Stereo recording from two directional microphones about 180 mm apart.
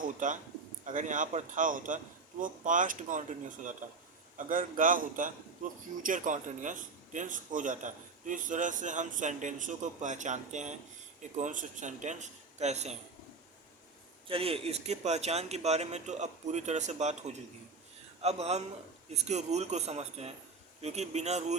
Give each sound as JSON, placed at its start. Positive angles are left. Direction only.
{"t": 0.2, "sound": "a man's voice", "side_deg": -45}
{"t": 14.3, "sound": "a man's voice", "side_deg": -30}